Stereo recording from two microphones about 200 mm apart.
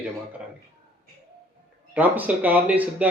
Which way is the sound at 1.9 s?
5° right (ahead or behind).